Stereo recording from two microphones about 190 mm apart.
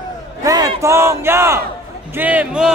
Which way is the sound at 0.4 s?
20° right (ahead or behind).